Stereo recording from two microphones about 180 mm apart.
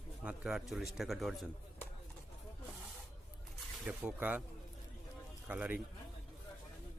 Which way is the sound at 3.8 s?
5° right (ahead or behind).